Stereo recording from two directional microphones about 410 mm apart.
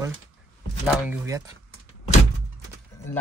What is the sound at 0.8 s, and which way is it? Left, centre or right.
Speech, centre.